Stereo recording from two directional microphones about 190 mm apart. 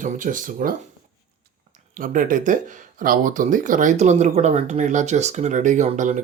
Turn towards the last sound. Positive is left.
turn(degrees=-40)  # may be behind; listen again after turning